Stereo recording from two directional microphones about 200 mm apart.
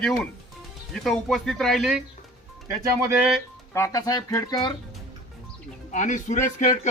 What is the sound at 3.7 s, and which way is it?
Speech, 15° left (ahead or behind).